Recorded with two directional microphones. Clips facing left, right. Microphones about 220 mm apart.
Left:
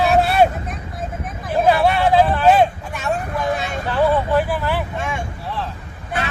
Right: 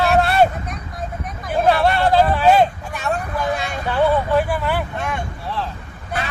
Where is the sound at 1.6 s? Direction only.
5° left (ahead or behind).